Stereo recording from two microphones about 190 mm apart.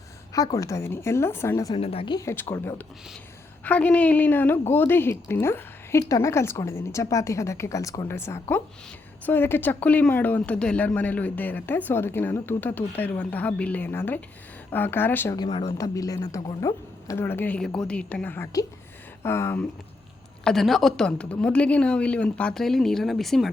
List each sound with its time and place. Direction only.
0.3 s a woman's voice: 20° left (ahead or behind)
1.8 s a woman's voice: 30° left (ahead or behind); by 15.4 s 10° left (ahead or behind)
15.4 s a woman's voice: 25° left (ahead or behind)
20.4 s speech: centre (ahead or behind)